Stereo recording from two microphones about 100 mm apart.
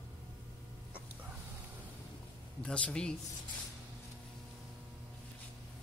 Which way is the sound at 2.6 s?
10° left (ahead or behind).